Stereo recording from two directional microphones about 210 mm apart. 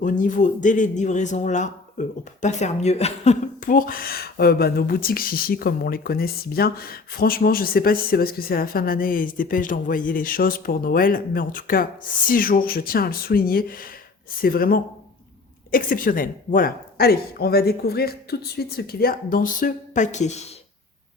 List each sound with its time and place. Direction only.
0.0 s speech: 40° left (ahead or behind)